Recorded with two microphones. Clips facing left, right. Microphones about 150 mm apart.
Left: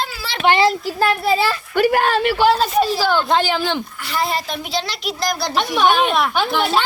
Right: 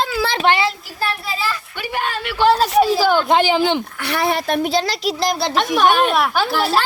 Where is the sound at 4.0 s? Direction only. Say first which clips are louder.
Right 2 dB; 65° right (ahead or behind); by 5.5 s 30° right (ahead or behind).